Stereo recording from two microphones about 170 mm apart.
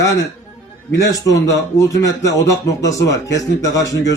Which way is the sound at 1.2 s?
20° left (ahead or behind).